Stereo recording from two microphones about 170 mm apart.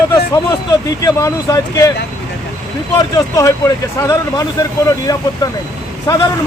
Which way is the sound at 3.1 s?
20° left (ahead or behind).